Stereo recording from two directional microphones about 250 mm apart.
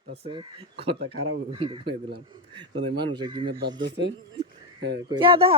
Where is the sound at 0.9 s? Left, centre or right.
Right.